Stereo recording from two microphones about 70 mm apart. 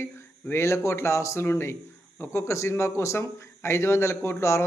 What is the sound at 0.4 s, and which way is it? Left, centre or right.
Speech, left.